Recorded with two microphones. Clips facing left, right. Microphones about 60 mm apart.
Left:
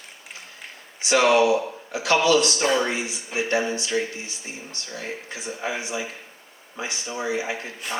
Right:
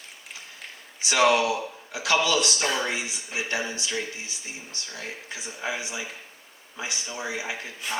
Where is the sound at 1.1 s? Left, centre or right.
Left.